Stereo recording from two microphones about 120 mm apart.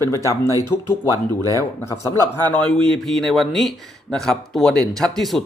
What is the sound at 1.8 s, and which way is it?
Speech, 25° left (ahead or behind).